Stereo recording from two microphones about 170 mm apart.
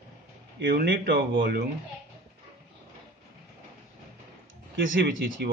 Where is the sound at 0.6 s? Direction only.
60° right (ahead or behind).